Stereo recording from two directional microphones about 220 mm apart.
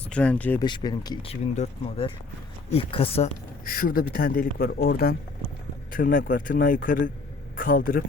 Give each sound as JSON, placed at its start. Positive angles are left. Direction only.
{"t": 0.1, "sound": "speech", "side_deg": 5}
{"t": 0.6, "sound": "speech", "side_deg": 20}
{"t": 3.6, "sound": "speech", "side_deg": 40}
{"t": 4.5, "sound": "speech", "side_deg": 50}